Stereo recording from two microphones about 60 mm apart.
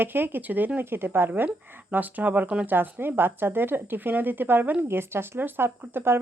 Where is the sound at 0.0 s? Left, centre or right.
Right.